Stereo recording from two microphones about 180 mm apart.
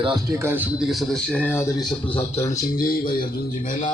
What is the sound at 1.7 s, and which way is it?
Speech, centre (ahead or behind).